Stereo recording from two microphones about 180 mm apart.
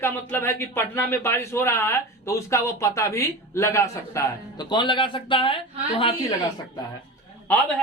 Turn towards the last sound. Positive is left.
turn(degrees=10)  # may be behind; listen again after turning